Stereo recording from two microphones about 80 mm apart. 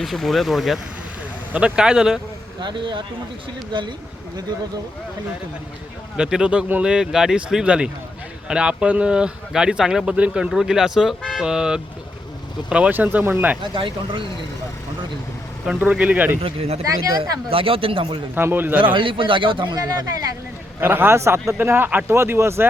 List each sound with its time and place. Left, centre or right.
0.0 s speech: centre
1.5 s speech: centre
2.6 s speech: right
6.1 s speech: centre
10.1 s a man's voice: centre
13.7 s speech: right
15.6 s a man's voice: centre
16.8 s speech: right
17.7 s speech: right
18.3 s a man's voice: right
18.9 s speech: right
20.8 s a man's voice: right